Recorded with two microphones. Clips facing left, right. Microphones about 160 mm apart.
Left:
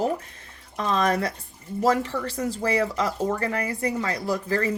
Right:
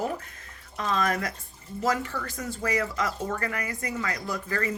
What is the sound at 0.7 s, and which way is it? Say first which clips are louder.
Speech: left 4 dB; 35° left (ahead or behind).